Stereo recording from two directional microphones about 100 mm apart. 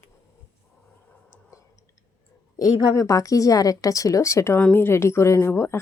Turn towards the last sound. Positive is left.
turn(degrees=20)  # may be behind; listen again after turning